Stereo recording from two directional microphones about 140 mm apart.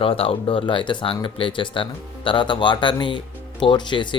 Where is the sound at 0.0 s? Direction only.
40° left (ahead or behind).